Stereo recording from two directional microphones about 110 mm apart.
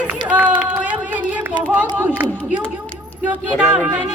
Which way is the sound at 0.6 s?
15° right (ahead or behind).